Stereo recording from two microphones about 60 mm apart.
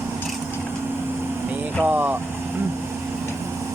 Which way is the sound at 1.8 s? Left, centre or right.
Right.